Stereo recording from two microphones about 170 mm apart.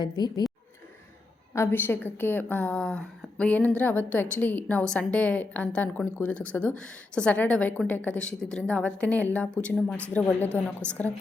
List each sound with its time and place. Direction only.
0.0 s speech: 25° left (ahead or behind)
1.5 s a woman's voice: 15° left (ahead or behind)